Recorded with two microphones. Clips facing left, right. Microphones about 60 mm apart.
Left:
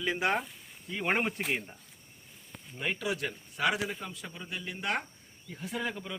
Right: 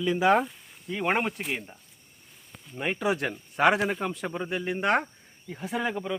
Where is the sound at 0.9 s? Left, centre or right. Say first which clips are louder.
Right 4 dB; centre.